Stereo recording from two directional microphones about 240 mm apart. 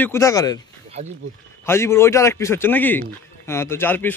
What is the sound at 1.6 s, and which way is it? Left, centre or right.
Speech, centre.